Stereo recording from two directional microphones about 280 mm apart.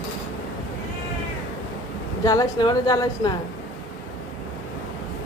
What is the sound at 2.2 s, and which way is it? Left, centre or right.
A woman's voice, centre.